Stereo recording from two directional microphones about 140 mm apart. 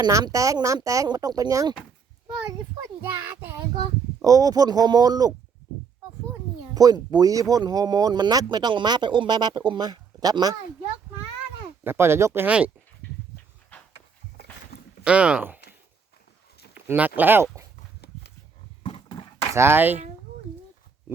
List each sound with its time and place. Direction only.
0.0 s speech: 25° right (ahead or behind)
3.8 s speech: 25° right (ahead or behind)
6.7 s speech: 30° right (ahead or behind)
11.8 s speech: 15° right (ahead or behind)
15.0 s speech: 5° right (ahead or behind)
16.7 s a sound: 15° right (ahead or behind)
17.2 s speech: 15° right (ahead or behind)
18.8 s a sound: 40° left (ahead or behind)
19.5 s speech: 15° right (ahead or behind)